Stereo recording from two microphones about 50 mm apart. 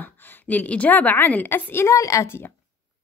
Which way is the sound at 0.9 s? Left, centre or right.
Left.